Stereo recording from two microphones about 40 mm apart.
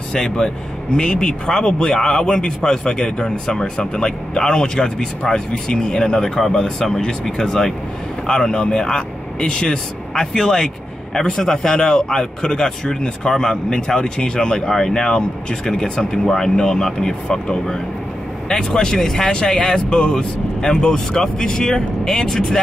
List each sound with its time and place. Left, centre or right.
0.1 s a man's voice: centre
18.5 s a man's voice: centre
20.2 s a man's voice: centre